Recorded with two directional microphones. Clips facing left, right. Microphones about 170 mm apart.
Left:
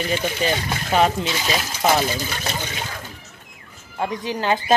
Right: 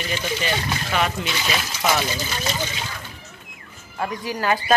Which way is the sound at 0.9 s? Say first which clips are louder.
Left 6 dB; 35° left (ahead or behind).